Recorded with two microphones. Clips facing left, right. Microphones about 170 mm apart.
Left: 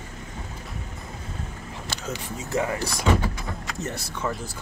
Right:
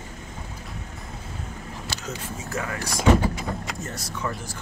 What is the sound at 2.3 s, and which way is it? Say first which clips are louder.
Speech: left 6 dB; 20° left (ahead or behind).